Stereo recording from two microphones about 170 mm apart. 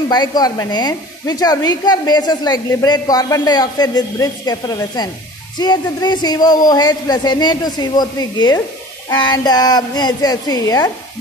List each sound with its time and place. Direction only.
0.1 s speech: 25° left (ahead or behind)